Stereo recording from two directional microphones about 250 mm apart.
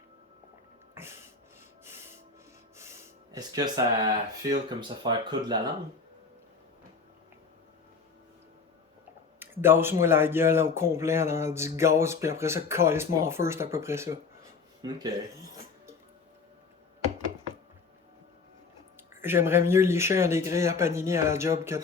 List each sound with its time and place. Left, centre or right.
1.0 s a sound: centre
2.7 s speech: centre
9.4 s speech: centre
19.1 s speech: centre